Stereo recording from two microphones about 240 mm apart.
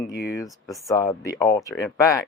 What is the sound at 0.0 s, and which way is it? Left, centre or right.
Speech, left.